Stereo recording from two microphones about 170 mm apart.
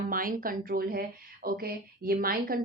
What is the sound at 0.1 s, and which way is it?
Speech, 55° right (ahead or behind).